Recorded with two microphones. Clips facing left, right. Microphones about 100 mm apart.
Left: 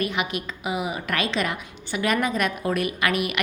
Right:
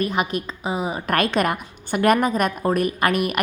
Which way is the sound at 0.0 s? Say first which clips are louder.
Right 4 dB; 40° right (ahead or behind).